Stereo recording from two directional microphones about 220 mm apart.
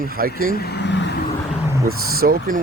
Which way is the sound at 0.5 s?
45° left (ahead or behind).